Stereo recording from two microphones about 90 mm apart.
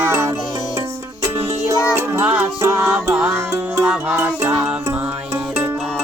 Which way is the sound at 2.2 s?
15° right (ahead or behind).